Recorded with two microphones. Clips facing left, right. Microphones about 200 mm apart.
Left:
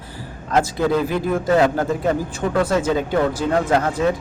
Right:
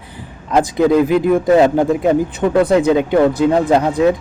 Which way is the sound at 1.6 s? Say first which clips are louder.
Right 6 dB; 20° right (ahead or behind).